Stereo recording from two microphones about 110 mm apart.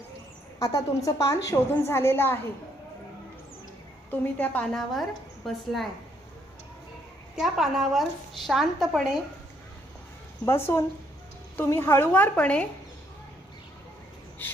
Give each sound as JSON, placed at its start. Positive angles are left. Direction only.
{"t": 0.6, "sound": "a woman's voice", "side_deg": 30}
{"t": 4.1, "sound": "a woman's voice", "side_deg": 15}
{"t": 4.7, "sound": "a woman's voice", "side_deg": 0}
{"t": 7.3, "sound": "a woman's voice", "side_deg": -5}
{"t": 10.4, "sound": "a woman's voice", "side_deg": 25}
{"t": 14.4, "sound": "insect", "side_deg": 20}